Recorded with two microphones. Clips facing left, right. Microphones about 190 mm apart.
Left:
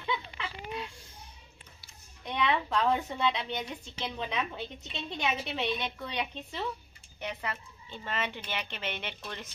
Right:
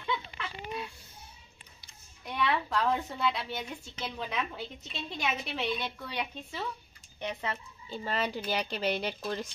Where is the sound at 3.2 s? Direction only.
5° right (ahead or behind).